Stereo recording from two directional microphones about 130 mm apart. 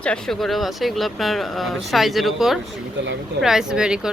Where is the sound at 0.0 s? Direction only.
5° left (ahead or behind).